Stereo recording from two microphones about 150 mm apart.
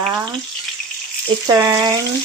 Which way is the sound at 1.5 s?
25° right (ahead or behind).